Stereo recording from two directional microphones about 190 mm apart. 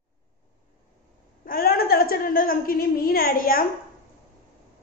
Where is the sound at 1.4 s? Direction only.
50° left (ahead or behind).